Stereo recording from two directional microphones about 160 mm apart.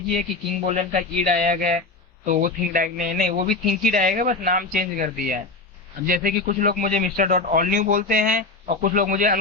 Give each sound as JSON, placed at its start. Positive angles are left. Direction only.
{"t": 0.2, "sound": "a man's voice", "side_deg": -50}